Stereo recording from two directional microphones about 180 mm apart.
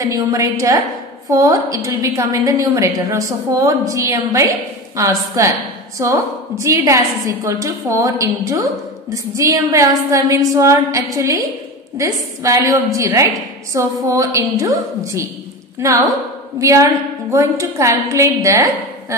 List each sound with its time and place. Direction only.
0.0 s a woman's voice: 15° right (ahead or behind)